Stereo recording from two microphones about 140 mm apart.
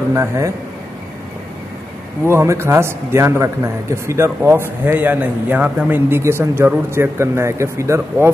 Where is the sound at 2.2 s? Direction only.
20° right (ahead or behind).